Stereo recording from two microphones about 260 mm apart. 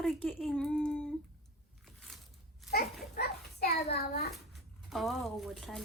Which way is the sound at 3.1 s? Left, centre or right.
Left.